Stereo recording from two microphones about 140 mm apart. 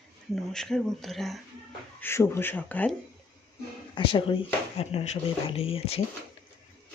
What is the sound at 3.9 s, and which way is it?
Speech, 40° left (ahead or behind).